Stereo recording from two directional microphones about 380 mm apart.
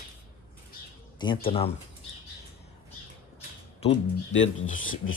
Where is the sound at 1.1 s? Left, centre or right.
Centre.